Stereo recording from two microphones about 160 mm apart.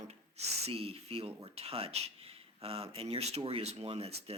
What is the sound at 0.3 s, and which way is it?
Speech, 40° right (ahead or behind).